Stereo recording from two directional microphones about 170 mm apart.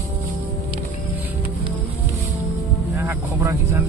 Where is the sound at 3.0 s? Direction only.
15° right (ahead or behind).